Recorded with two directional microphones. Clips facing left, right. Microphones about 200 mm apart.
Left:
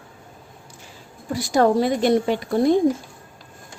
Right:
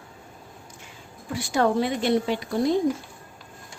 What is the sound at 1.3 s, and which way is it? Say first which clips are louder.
A woman's voice: left 5 dB; 40° left (ahead or behind).